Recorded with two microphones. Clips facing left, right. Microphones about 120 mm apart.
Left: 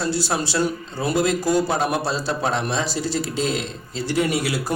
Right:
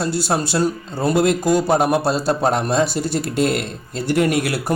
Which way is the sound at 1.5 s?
55° right (ahead or behind).